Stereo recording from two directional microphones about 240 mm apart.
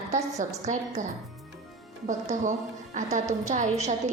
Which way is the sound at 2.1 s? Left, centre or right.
Right.